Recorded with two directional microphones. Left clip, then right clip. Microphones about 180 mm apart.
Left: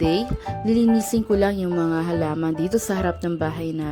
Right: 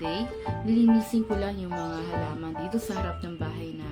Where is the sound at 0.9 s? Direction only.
45° left (ahead or behind).